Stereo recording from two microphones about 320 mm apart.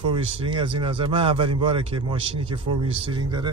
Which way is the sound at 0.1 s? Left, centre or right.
Centre.